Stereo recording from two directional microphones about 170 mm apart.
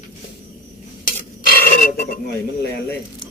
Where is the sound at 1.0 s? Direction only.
60° left (ahead or behind).